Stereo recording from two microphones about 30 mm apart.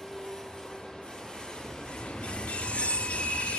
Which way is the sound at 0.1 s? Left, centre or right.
Centre.